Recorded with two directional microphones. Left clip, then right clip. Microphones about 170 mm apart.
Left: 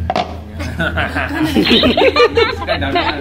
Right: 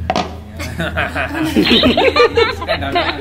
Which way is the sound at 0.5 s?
65° right (ahead or behind).